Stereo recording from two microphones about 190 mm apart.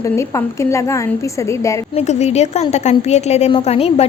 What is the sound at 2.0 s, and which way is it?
Speech, 35° left (ahead or behind).